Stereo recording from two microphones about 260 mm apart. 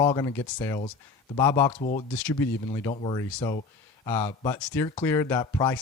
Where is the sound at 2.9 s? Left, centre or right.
Centre.